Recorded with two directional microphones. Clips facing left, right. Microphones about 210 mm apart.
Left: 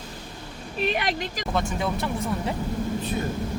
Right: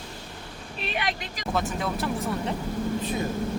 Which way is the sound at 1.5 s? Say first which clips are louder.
Even; 5° right (ahead or behind).